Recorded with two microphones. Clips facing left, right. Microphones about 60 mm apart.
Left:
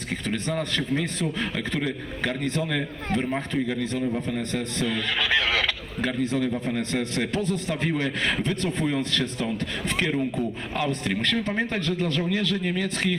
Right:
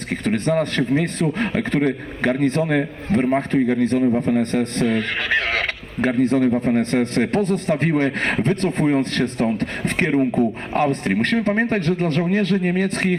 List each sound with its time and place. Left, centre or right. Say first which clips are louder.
0.1 s a man's voice: right 8 dB; right